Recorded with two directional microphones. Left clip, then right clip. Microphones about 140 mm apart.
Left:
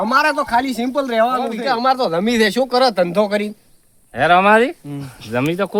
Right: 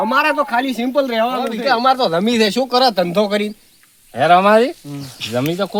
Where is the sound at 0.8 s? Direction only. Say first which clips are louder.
Even; 5° right (ahead or behind).